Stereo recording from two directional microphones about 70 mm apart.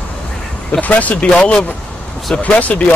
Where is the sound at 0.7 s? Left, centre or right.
Left.